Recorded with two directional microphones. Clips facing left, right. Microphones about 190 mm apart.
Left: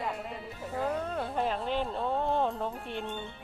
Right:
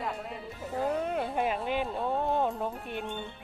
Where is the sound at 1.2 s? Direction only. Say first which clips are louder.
Right 1 dB; 5° right (ahead or behind).